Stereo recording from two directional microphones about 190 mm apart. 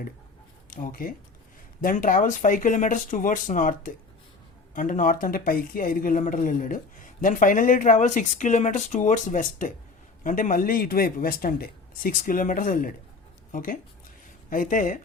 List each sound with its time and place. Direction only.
0.7 s speech: 45° left (ahead or behind)